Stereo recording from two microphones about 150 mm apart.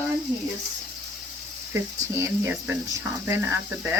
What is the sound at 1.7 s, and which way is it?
Speech, 20° right (ahead or behind).